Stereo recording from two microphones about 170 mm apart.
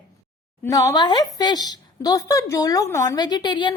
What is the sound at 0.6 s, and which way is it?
A woman's voice, 20° left (ahead or behind).